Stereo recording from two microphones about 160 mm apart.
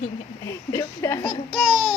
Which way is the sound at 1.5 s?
5° right (ahead or behind).